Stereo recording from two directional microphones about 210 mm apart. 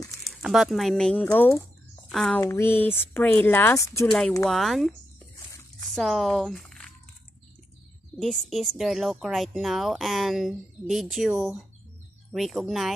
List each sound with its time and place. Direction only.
0.2 s speech: centre (ahead or behind)
2.4 s speech: 10° left (ahead or behind)
4.5 s speech: centre (ahead or behind)
5.5 s a sound: 15° left (ahead or behind)
5.9 s speech: centre (ahead or behind)
8.2 s speech: centre (ahead or behind)